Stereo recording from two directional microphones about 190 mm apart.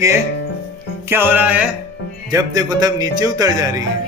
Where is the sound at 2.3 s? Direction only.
20° right (ahead or behind).